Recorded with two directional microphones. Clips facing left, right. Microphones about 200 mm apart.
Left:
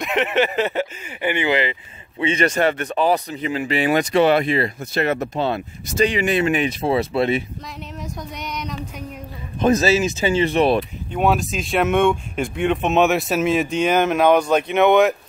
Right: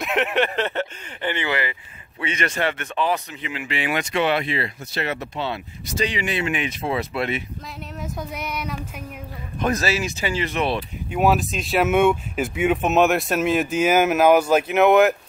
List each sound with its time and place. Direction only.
0.0 s speech: centre (ahead or behind); by 7.4 s 30° left (ahead or behind)
8.0 s speech: 5° right (ahead or behind)
9.6 s speech: 25° left (ahead or behind)
11.1 s speech: 5° right (ahead or behind)